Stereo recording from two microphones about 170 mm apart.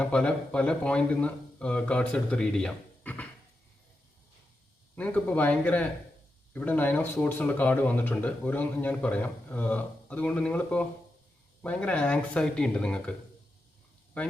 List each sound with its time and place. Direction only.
0.0 s speech: 5° left (ahead or behind)
4.9 s speech: 10° left (ahead or behind)